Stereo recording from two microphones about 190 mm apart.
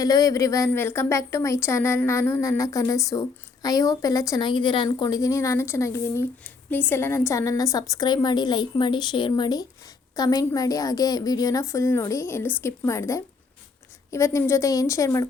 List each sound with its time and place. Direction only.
0.0 s a woman's voice: 20° left (ahead or behind)